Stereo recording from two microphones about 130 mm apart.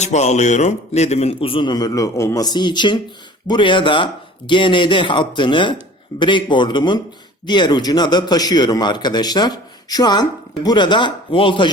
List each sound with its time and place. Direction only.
0.0 s a man's voice: 60° left (ahead or behind); by 11.7 s 40° left (ahead or behind)